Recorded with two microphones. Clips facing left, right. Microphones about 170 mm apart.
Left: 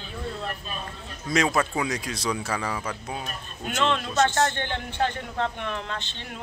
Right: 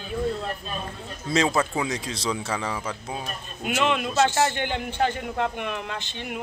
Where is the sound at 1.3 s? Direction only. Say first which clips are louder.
Right 1 dB; 30° right (ahead or behind).